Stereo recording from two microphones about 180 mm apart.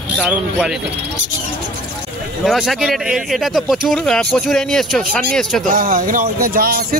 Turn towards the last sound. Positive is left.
turn(degrees=-55)  # may be behind; listen again after turning